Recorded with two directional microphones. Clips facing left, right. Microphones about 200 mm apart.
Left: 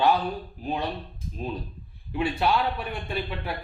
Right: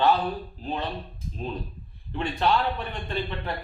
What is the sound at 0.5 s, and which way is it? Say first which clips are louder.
Speech: left 1 dB; 10° left (ahead or behind).